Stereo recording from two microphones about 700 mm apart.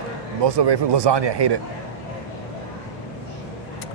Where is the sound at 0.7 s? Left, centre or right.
Right.